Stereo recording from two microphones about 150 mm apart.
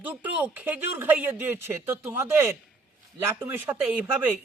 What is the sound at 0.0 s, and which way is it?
A man's voice, 10° right (ahead or behind).